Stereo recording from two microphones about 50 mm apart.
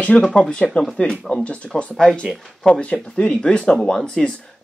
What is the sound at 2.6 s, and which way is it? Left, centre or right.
Speech, left.